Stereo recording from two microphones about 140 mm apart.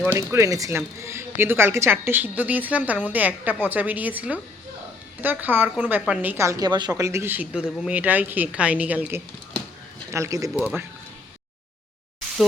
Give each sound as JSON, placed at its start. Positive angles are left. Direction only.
{"t": 0.0, "sound": "a woman's voice", "side_deg": -20}
{"t": 10.5, "sound": "speech", "side_deg": -5}